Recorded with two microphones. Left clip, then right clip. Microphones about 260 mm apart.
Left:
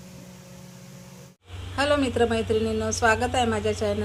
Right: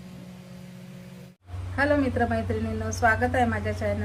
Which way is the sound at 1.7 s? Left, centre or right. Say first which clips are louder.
Left 1 dB; left.